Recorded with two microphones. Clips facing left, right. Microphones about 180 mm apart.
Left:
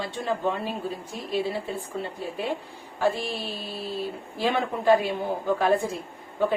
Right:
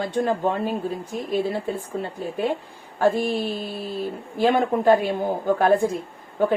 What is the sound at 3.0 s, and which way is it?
Speech, 50° right (ahead or behind).